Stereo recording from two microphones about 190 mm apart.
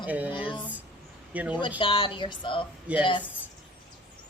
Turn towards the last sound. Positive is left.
turn(degrees=-5)  # may be behind; listen again after turning